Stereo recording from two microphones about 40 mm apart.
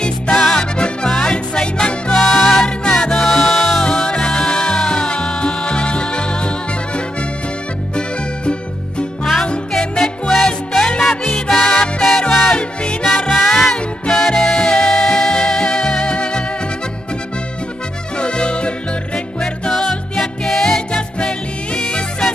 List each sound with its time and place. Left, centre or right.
0.0 s music: centre
2.2 s music: centre
3.8 s music: centre
9.2 s music: centre
14.1 s music: centre
18.1 s music: left
20.9 s music: left